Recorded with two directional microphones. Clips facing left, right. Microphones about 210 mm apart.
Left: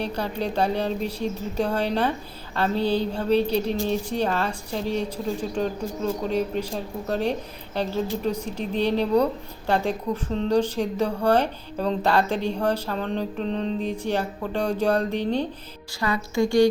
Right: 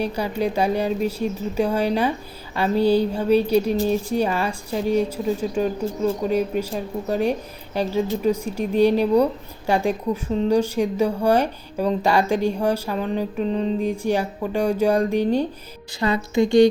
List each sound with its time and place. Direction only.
0.0 s speech: 10° right (ahead or behind)
16.0 s a woman's voice: 20° right (ahead or behind)